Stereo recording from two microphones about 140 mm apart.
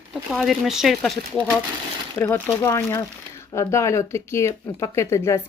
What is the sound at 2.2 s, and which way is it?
Speech, 15° left (ahead or behind).